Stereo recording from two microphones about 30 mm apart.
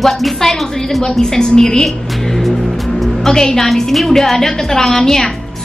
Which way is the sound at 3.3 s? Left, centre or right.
Centre.